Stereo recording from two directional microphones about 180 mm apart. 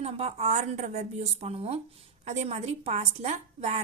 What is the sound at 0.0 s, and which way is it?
A woman's voice, 35° right (ahead or behind).